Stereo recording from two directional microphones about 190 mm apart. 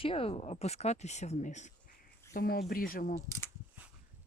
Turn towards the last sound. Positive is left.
turn(degrees=45)  # may be behind; listen again after turning